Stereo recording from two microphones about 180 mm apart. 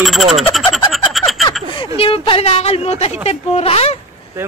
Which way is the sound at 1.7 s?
30° left (ahead or behind).